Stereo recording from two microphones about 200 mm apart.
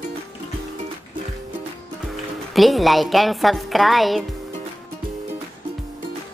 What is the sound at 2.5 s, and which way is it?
A woman's voice, centre (ahead or behind).